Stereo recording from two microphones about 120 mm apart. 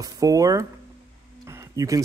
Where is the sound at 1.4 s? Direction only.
25° right (ahead or behind).